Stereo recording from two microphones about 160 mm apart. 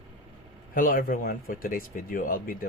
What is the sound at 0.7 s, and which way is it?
Speech, 60° left (ahead or behind).